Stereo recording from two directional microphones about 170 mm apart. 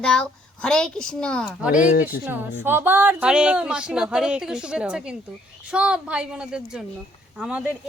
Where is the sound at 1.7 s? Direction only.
50° left (ahead or behind).